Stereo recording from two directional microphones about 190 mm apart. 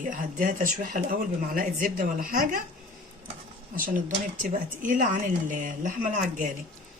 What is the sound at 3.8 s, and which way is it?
Speech, 45° right (ahead or behind).